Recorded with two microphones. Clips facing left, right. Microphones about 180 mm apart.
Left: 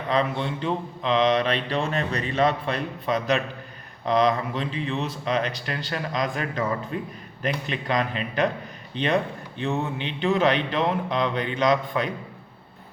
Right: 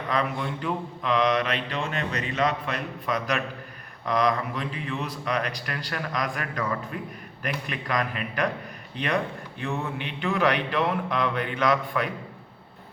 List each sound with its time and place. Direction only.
0.1 s mantra: 25° left (ahead or behind)